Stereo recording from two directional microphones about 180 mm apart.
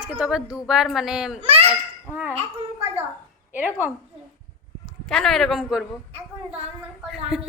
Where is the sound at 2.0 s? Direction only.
10° right (ahead or behind).